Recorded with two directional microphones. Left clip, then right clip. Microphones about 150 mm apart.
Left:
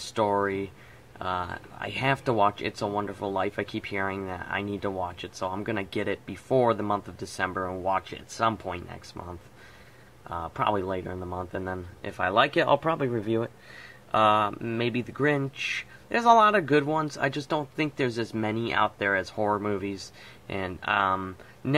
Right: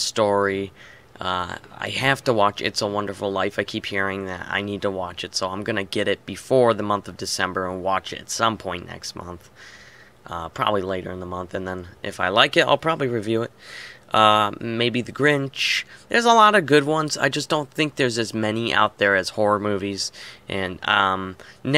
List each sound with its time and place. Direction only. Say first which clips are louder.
0.1 s speech: right 4 dB; 25° right (ahead or behind)
14.1 s speech: right 6 dB; 30° right (ahead or behind)